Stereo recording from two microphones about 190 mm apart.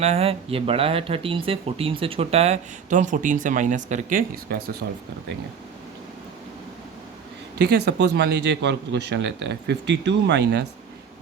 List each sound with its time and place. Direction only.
0.0 s speech: 35° right (ahead or behind)
4.5 s a man's voice: 55° right (ahead or behind)
7.6 s a man's voice: 60° right (ahead or behind)